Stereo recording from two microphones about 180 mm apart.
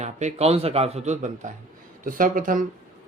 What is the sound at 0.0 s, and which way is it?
Speech, 40° right (ahead or behind).